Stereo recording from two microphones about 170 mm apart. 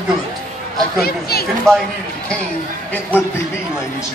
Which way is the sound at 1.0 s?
65° left (ahead or behind).